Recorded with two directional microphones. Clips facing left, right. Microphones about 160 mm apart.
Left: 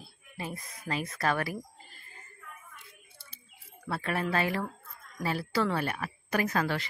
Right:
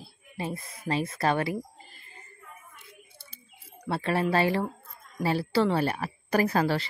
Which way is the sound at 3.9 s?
30° right (ahead or behind).